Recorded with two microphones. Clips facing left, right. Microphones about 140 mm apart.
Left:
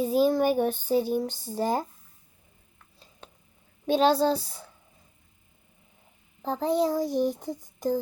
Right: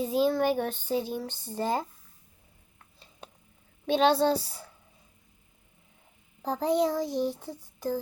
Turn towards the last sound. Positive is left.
turn(degrees=15)  # may be behind; listen again after turning